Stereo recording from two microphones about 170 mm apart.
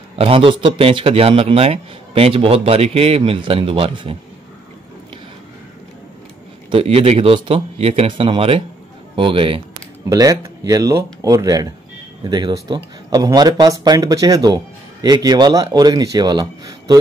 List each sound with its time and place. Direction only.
0.1 s a man's voice: 35° right (ahead or behind)
6.7 s a man's voice: 35° right (ahead or behind)
10.0 s speech: 20° right (ahead or behind)